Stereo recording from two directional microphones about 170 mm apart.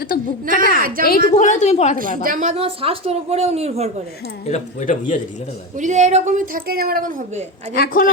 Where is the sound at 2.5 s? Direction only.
35° right (ahead or behind).